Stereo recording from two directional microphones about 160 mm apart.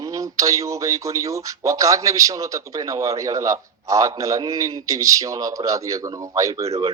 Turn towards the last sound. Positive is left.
turn(degrees=-20)  # may be behind; listen again after turning